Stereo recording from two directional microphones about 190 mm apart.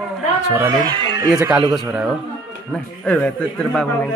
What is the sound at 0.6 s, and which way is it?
Speech, 20° right (ahead or behind).